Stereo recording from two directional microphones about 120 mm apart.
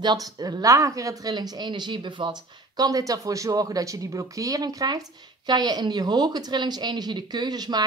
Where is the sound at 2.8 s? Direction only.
30° right (ahead or behind).